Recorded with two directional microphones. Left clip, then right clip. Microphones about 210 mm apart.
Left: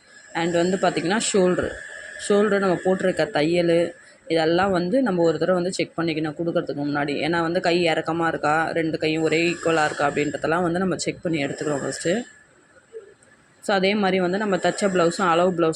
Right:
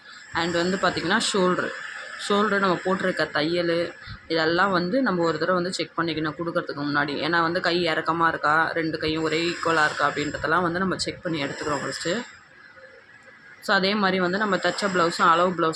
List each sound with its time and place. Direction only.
0.3 s speech: 15° left (ahead or behind)
13.7 s speech: 15° left (ahead or behind)